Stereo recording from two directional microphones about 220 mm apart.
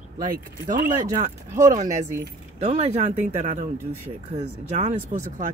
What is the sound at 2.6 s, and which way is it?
Speech, 30° right (ahead or behind).